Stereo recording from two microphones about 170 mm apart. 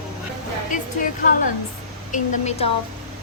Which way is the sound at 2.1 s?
40° left (ahead or behind).